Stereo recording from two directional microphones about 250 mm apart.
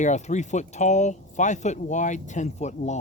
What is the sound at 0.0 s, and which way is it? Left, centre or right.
Speech, left.